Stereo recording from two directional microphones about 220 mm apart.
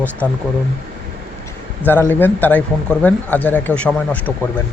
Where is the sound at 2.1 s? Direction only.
10° left (ahead or behind).